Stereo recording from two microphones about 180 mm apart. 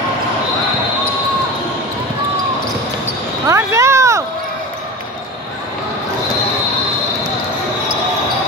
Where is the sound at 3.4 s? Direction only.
15° right (ahead or behind).